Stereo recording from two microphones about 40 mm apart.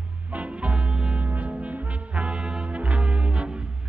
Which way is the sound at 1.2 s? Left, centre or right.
Right.